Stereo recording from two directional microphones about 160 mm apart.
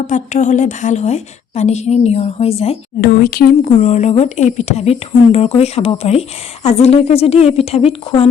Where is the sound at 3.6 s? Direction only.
50° left (ahead or behind).